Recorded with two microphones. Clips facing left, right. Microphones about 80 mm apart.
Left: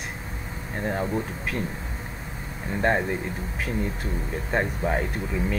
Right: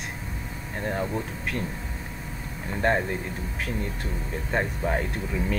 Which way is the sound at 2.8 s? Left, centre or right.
Centre.